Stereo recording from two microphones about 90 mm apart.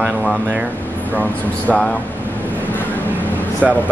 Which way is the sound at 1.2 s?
15° left (ahead or behind).